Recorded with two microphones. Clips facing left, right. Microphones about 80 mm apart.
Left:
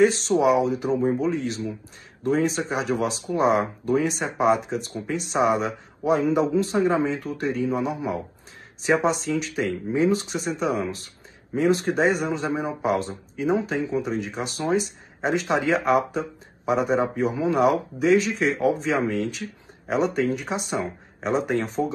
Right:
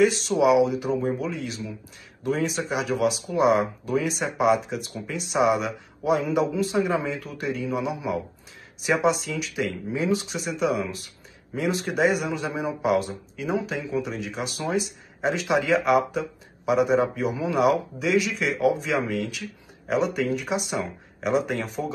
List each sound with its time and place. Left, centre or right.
0.0 s speech: left